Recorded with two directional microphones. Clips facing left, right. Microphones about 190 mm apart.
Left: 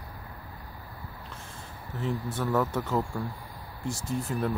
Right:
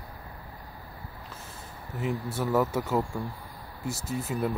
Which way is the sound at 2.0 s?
10° right (ahead or behind).